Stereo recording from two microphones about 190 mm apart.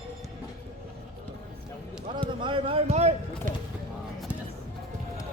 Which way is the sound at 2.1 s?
25° right (ahead or behind).